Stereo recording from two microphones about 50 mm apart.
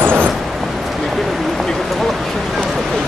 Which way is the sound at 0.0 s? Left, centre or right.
Right.